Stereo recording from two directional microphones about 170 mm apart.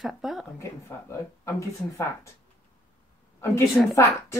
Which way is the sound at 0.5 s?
15° left (ahead or behind).